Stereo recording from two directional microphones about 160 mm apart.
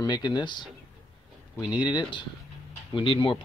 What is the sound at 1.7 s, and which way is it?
Speech, 25° left (ahead or behind).